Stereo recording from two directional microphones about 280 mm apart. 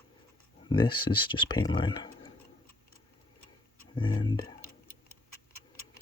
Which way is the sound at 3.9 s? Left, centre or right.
Centre.